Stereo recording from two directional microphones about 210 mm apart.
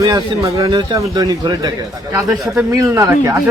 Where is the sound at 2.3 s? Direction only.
5° right (ahead or behind).